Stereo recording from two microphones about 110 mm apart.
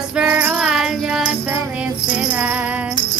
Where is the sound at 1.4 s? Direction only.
15° right (ahead or behind).